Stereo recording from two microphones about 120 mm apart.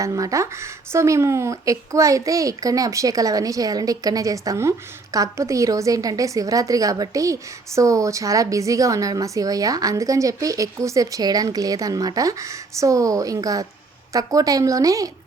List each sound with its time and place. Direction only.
0.0 s a woman's voice: 30° right (ahead or behind)